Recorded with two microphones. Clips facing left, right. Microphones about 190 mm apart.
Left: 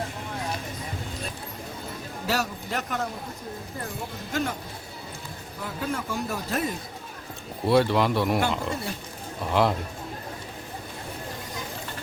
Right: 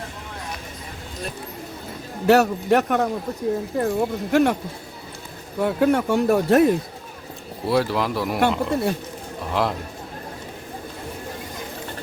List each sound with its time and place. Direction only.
2.2 s a man's voice: 65° right (ahead or behind)
5.5 s speech: 70° right (ahead or behind)
7.7 s speech: centre (ahead or behind)
8.4 s a man's voice: 65° right (ahead or behind)
9.5 s speech: centre (ahead or behind)